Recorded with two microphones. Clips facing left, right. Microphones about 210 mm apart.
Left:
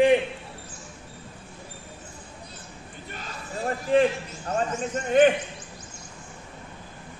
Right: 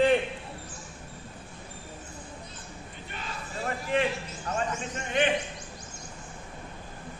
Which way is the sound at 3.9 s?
35° left (ahead or behind).